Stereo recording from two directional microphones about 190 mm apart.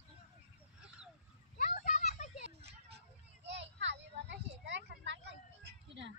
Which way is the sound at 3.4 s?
70° right (ahead or behind).